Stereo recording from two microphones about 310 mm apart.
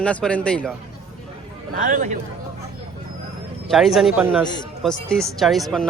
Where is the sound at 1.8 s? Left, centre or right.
Right.